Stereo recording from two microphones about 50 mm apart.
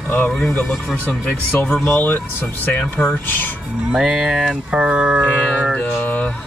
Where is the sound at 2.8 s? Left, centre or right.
Left.